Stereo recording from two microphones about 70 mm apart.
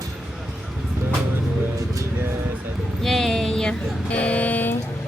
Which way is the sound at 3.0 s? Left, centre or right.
Centre.